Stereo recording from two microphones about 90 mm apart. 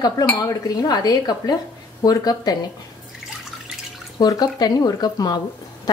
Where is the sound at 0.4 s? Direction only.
45° left (ahead or behind).